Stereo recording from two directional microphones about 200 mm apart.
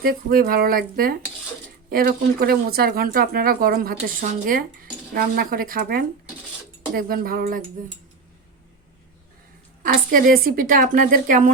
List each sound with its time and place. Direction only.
0.0 s speech: 45° right (ahead or behind)
9.8 s speech: 45° right (ahead or behind)